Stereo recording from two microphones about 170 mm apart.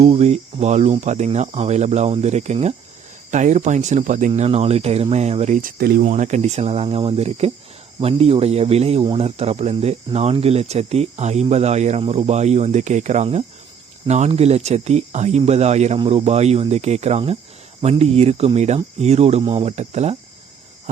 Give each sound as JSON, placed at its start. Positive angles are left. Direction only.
{"t": 0.0, "sound": "speech", "side_deg": -40}
{"t": 4.3, "sound": "speech", "side_deg": -35}
{"t": 5.7, "sound": "speech", "side_deg": -65}
{"t": 6.0, "sound": "speech", "side_deg": -45}